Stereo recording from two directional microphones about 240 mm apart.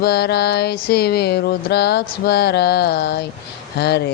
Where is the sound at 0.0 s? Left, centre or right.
Left.